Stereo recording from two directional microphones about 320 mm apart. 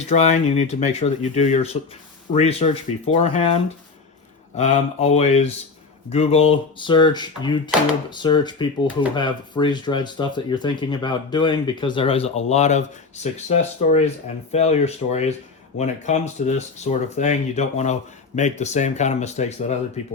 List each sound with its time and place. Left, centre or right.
0.0 s speech: left